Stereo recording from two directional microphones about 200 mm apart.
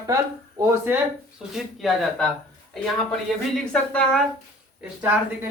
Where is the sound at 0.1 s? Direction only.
15° right (ahead or behind).